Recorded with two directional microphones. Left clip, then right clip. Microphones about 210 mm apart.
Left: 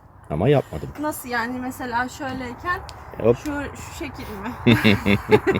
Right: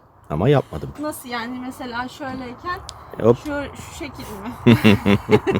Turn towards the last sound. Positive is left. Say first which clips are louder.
# even
turn(degrees=-15)  # may be behind; listen again after turning